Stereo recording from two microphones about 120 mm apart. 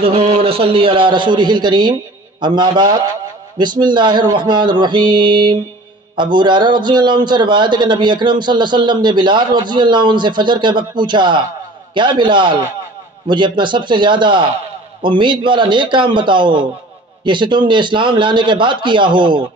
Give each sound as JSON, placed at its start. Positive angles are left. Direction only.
{"t": 0.0, "sound": "a man's voice", "side_deg": -50}